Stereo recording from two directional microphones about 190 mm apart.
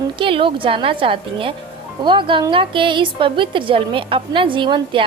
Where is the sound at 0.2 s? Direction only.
25° right (ahead or behind).